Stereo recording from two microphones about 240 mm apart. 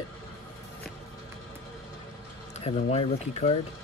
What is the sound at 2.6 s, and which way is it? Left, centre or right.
Speech, left.